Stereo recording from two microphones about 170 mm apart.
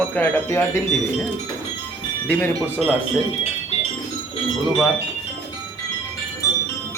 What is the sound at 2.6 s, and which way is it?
Speech, 10° right (ahead or behind).